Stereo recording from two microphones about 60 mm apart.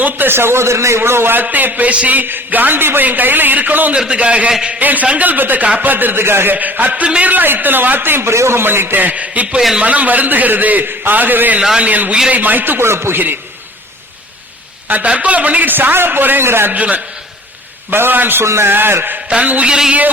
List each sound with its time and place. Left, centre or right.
0.0 s a man's voice: right
3.9 s a man's voice: centre
6.9 s a man's voice: centre
9.6 s a man's voice: centre
9.8 s a man's voice: right
14.8 s a man's voice: right
16.7 s a man's voice: right
17.9 s a man's voice: right
18.4 s a man's voice: right
18.7 s a man's voice: right
19.4 s a man's voice: right